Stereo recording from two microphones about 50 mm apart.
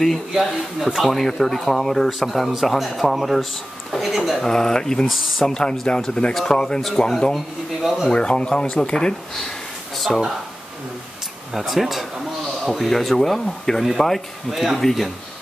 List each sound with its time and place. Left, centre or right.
0.5 s speech: centre
1.1 s speech: centre
4.5 s speech: centre
5.0 s speech: centre
5.5 s speech: centre
7.3 s speech: centre
8.1 s speech: centre
9.9 s a sound: centre
11.5 s speech: centre